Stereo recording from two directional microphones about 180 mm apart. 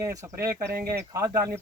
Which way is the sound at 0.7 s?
60° right (ahead or behind).